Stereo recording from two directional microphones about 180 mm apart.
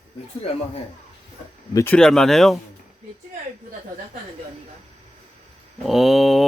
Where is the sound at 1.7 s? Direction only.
15° left (ahead or behind).